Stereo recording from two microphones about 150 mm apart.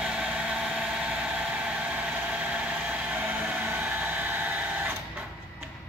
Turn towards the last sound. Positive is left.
turn(degrees=-10)  # may be behind; listen again after turning